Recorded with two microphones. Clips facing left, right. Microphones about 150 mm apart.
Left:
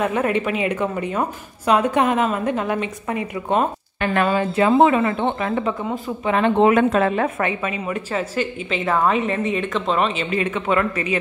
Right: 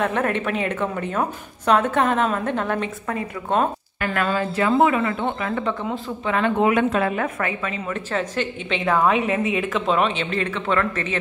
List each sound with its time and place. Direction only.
0.0 s a woman's voice: 5° left (ahead or behind); by 5.7 s 20° left (ahead or behind)
5.7 s a woman's voice: 5° left (ahead or behind)
6.2 s a woman's voice: 20° left (ahead or behind)
6.7 s a woman's voice: 40° left (ahead or behind); by 10.2 s centre (ahead or behind)
10.3 s a woman's voice: 15° left (ahead or behind)